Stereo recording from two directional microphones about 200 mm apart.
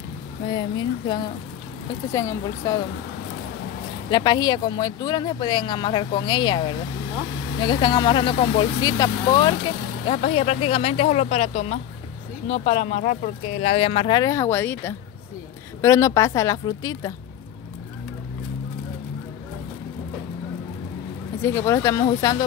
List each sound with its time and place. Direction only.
0.5 s speech: 20° left (ahead or behind)
4.1 s speech: 20° left (ahead or behind)
10.0 s speech: 30° left (ahead or behind)
13.0 s speech: 45° left (ahead or behind)
13.6 s speech: 30° left (ahead or behind)
21.4 s speech: 10° left (ahead or behind)